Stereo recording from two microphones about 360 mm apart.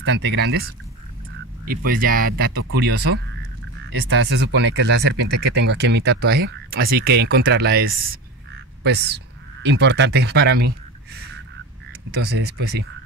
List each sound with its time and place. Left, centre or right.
0.0 s speech: right
1.9 s speech: right
12.2 s speech: right